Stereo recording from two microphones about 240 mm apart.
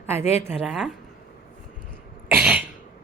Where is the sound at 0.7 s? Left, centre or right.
Centre.